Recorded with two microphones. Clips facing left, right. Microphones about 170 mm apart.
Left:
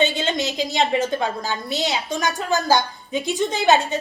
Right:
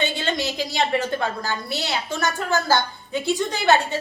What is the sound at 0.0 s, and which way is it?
A woman's voice, 20° left (ahead or behind).